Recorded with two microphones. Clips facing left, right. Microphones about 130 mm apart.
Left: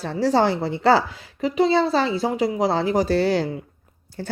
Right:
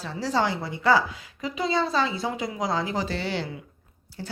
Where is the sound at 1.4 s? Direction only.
35° left (ahead or behind).